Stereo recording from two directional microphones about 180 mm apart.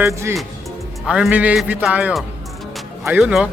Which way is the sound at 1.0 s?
5° right (ahead or behind).